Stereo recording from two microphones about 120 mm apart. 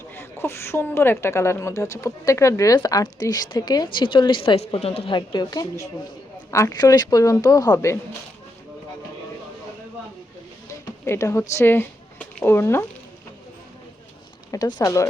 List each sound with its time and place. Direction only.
0.1 s a woman's voice: 20° left (ahead or behind)
10.7 s a sound: 25° left (ahead or behind)
14.5 s a woman's voice: 30° left (ahead or behind)